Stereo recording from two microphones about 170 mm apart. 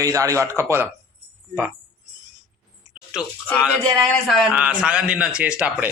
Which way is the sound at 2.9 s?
5° right (ahead or behind).